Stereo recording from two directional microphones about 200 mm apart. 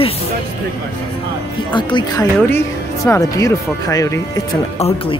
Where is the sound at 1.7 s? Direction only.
25° left (ahead or behind).